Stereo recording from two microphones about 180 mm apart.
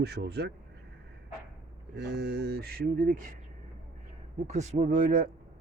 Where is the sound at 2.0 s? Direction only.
70° right (ahead or behind); by 3.3 s 50° right (ahead or behind).